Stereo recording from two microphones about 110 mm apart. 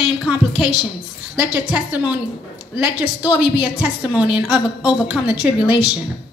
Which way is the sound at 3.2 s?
40° left (ahead or behind).